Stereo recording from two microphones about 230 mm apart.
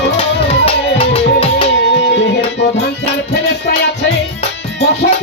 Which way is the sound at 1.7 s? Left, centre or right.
Left.